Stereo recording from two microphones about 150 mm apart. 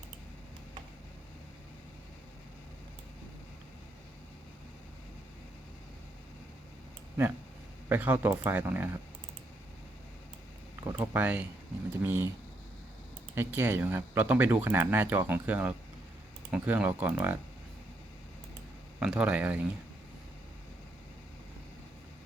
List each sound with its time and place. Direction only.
7.9 s speech: 15° right (ahead or behind)
10.8 s speech: 25° right (ahead or behind)
11.1 s speech: 10° right (ahead or behind)
13.3 s speech: 15° right (ahead or behind)
18.9 s speech: 10° right (ahead or behind)